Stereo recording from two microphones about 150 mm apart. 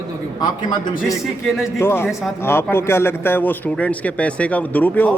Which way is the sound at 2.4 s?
15° left (ahead or behind).